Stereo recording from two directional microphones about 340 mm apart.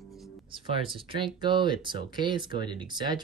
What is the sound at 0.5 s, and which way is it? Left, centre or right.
Speech, centre.